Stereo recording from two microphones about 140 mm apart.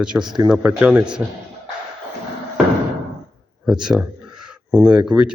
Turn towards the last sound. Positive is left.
turn(degrees=-5)  # may be behind; listen again after turning